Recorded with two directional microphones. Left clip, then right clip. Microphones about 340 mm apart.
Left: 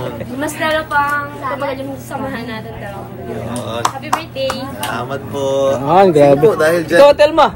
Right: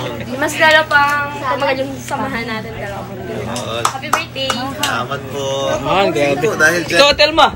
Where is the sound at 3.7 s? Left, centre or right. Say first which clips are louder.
Even; left.